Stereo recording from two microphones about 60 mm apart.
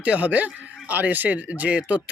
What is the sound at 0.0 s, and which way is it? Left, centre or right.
Speech, right.